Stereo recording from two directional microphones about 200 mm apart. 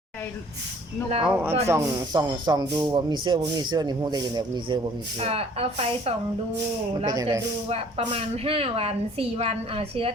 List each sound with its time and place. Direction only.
1.2 s speech: 10° right (ahead or behind); by 6.1 s 30° right (ahead or behind)
7.0 s speech: 20° right (ahead or behind)
7.7 s speech: 30° right (ahead or behind)